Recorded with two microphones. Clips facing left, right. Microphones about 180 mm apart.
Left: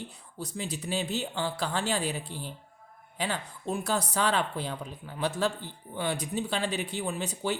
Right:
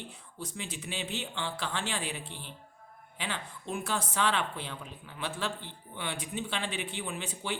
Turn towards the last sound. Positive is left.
turn(degrees=40)  # may be behind; listen again after turning